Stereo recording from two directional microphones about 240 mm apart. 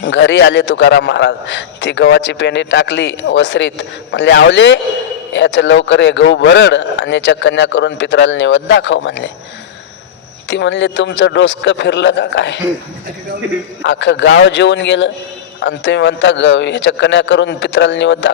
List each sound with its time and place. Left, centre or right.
0.0 s a man's voice: left
10.5 s a man's voice: left
13.8 s a man's voice: left